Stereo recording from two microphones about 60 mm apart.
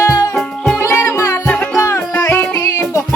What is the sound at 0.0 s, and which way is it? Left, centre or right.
Music, left.